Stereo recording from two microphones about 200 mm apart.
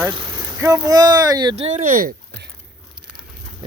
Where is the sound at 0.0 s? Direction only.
25° right (ahead or behind); by 2.5 s 45° right (ahead or behind).